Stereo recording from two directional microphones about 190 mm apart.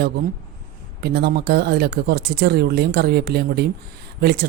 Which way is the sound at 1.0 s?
60° right (ahead or behind).